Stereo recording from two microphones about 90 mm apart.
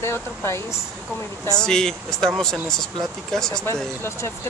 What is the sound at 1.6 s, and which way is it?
Speech, 5° left (ahead or behind).